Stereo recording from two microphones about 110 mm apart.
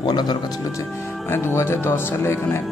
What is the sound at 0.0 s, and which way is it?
Speech, 40° left (ahead or behind).